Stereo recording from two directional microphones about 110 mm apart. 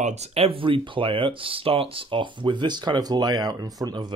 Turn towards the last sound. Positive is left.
turn(degrees=-40)  # may be behind; listen again after turning